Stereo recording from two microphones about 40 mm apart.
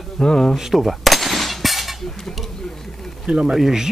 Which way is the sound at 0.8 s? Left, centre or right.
Centre.